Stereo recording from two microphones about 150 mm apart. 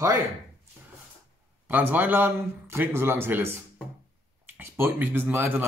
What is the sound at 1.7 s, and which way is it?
Speech, 10° right (ahead or behind).